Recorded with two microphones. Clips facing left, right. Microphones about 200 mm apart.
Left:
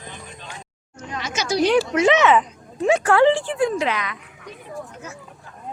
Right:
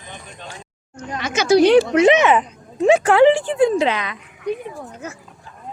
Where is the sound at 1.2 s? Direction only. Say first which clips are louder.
Right 7 dB; 60° right (ahead or behind).